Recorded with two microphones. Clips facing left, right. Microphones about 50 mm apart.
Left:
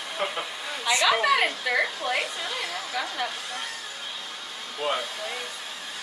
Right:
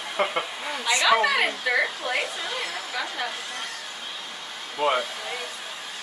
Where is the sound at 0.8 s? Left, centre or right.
Centre.